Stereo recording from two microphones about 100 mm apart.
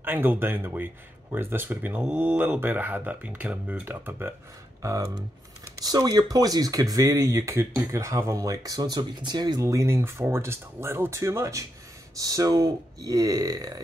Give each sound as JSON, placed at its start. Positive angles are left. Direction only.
{"t": 0.0, "sound": "speech", "side_deg": -20}
{"t": 4.8, "sound": "speech", "side_deg": -30}
{"t": 9.6, "sound": "speech", "side_deg": -30}